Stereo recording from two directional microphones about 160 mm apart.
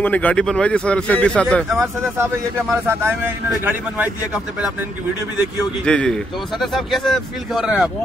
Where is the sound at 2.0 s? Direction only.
15° right (ahead or behind).